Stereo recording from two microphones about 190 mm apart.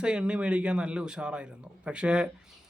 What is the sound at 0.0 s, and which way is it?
A man's voice, 5° right (ahead or behind).